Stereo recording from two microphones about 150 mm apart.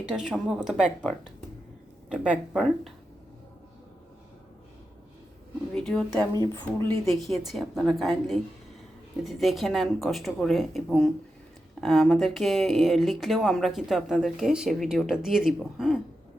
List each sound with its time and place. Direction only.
0.0 s speech: 5° right (ahead or behind)
2.2 s speech: 10° right (ahead or behind)
5.7 s speech: 5° left (ahead or behind)
6.4 s speech: 20° left (ahead or behind)
6.9 s speech: centre (ahead or behind)